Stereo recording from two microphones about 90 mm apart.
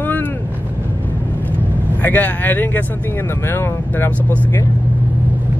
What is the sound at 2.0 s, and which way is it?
Speech, 20° left (ahead or behind).